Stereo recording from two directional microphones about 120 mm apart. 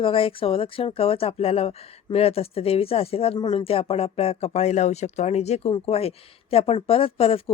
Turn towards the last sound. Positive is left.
turn(degrees=55)  # may be behind; listen again after turning